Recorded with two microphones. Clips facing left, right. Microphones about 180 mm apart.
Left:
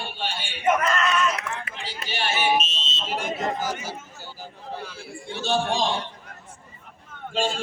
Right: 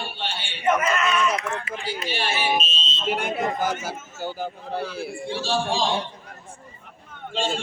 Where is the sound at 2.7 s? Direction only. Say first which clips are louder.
Right 3 dB; 75° left (ahead or behind).